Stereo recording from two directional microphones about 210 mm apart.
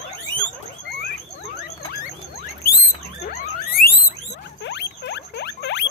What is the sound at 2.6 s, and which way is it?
Rodents, 45° left (ahead or behind).